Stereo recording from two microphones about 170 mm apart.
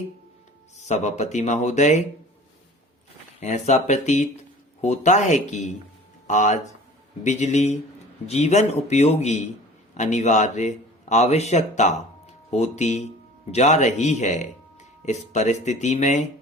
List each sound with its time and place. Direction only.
0.8 s speech: 45° left (ahead or behind)
3.4 s a man's voice: 45° left (ahead or behind)